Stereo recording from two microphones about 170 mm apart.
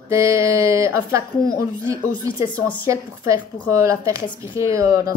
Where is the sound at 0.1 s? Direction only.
15° right (ahead or behind).